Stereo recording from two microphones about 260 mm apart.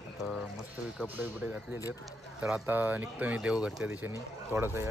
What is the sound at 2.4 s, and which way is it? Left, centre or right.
Speech, centre.